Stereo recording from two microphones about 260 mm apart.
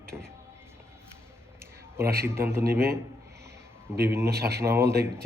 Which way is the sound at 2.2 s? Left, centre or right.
Centre.